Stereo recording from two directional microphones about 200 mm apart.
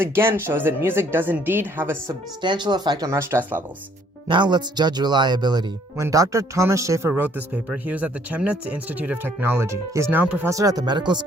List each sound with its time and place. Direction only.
0.0 s speech: 10° right (ahead or behind)
2.4 s speech: 20° right (ahead or behind)
4.3 s speech: 20° right (ahead or behind)